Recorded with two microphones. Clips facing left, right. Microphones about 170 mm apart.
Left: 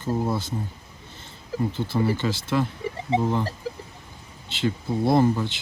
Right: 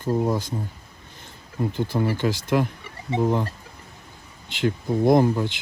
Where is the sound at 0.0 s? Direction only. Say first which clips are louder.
Right 3 dB; 15° right (ahead or behind).